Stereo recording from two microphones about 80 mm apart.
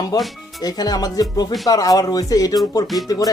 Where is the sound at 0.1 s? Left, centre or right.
Left.